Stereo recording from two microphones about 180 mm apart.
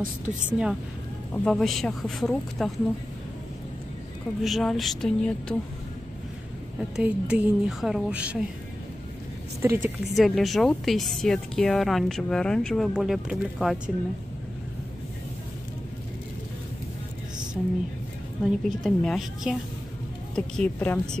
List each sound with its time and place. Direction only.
0.0 s a woman's voice: 45° right (ahead or behind)
0.5 s speech: 5° right (ahead or behind)
4.4 s speech: centre (ahead or behind)
6.8 s a woman's voice: 5° right (ahead or behind)
9.6 s a woman's voice: 15° right (ahead or behind)
10.1 s speech: centre (ahead or behind)
18.4 s speech: centre (ahead or behind)